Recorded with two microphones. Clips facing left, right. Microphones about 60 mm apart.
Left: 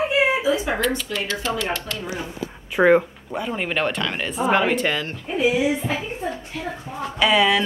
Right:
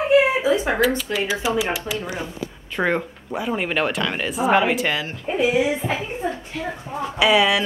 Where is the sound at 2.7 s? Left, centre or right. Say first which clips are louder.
Left 6 dB; centre.